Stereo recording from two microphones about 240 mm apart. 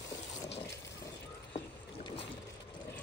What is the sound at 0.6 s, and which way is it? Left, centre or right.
Water, centre.